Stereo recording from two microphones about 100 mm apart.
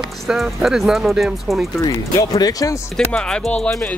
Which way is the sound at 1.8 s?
35° left (ahead or behind).